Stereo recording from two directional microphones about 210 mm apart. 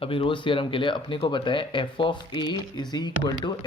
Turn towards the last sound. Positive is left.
turn(degrees=20)  # may be behind; listen again after turning